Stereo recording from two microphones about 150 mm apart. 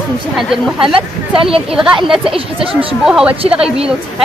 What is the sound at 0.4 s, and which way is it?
Speech, centre (ahead or behind).